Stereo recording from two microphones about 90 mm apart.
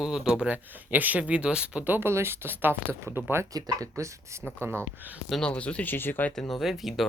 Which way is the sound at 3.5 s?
45° right (ahead or behind).